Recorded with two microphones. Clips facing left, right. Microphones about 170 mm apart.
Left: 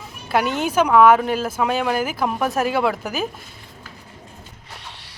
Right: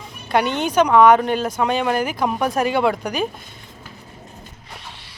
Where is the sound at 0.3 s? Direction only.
5° left (ahead or behind).